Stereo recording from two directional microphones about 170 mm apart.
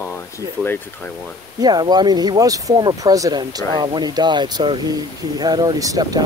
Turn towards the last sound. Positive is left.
turn(degrees=-20)  # may be behind; listen again after turning